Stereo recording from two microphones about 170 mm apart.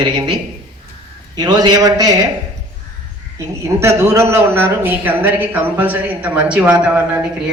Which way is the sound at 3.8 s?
15° right (ahead or behind).